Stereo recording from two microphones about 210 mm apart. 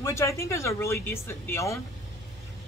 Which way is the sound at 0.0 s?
15° left (ahead or behind).